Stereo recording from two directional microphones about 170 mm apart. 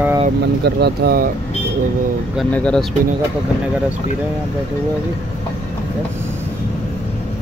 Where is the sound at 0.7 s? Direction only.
70° right (ahead or behind).